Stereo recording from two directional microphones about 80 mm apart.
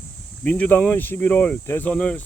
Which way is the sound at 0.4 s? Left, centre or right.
Centre.